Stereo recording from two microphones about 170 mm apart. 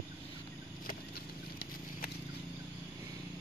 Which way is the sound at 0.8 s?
60° left (ahead or behind).